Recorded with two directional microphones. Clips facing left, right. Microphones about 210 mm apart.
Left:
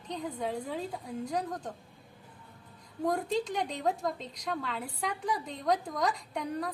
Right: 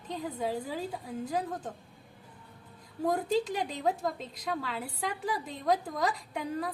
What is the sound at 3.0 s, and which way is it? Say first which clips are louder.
A woman's voice: right 2 dB; 5° right (ahead or behind).